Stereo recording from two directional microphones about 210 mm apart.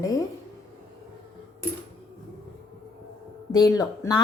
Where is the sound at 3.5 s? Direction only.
20° left (ahead or behind).